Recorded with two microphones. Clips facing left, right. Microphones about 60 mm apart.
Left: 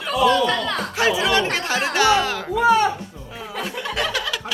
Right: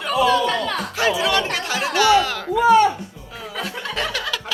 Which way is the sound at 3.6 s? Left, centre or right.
Centre.